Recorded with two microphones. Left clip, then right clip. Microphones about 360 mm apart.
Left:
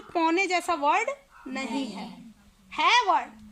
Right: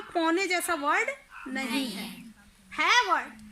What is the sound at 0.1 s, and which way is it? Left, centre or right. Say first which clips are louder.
Speech: left 2 dB; left.